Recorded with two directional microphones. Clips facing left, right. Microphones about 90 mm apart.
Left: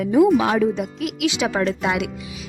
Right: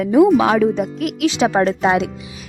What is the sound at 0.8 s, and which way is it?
Speech, 45° right (ahead or behind).